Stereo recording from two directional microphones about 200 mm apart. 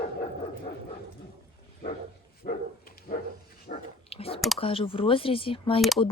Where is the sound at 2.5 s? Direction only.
45° left (ahead or behind).